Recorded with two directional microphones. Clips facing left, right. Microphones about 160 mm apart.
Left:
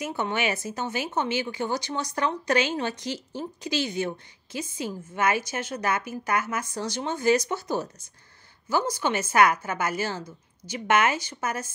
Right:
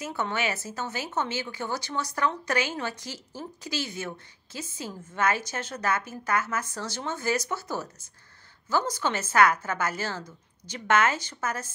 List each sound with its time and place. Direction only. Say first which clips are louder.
0.0 s speech: left 2 dB; 15° left (ahead or behind)